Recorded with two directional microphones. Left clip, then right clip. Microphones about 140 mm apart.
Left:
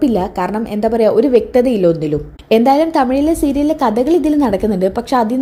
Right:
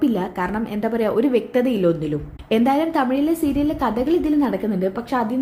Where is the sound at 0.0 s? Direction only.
30° left (ahead or behind).